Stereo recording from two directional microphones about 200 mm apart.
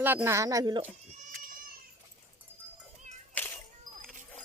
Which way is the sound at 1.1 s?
40° right (ahead or behind).